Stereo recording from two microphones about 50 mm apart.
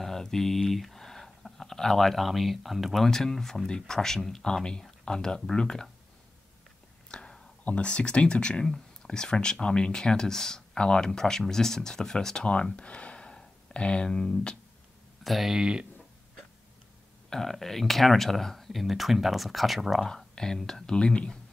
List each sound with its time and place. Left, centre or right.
0.0 s speech: centre
7.1 s whispering: centre
7.6 s speech: left
12.4 s speech: left
15.2 s speech: centre
15.5 s speech: centre
17.3 s speech: centre
20.1 s speech: centre